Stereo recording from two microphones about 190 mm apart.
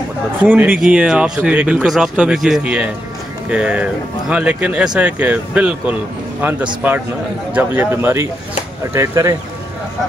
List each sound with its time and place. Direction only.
0.4 s speech: 10° right (ahead or behind)